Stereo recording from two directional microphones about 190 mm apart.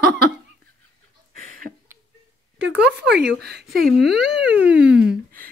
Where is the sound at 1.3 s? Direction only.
45° right (ahead or behind).